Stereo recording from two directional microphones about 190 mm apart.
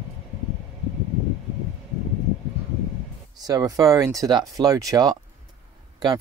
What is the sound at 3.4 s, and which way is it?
Speech, 20° right (ahead or behind).